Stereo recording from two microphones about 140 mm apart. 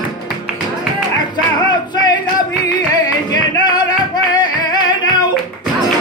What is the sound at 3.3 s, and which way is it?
Flamenco, 30° left (ahead or behind).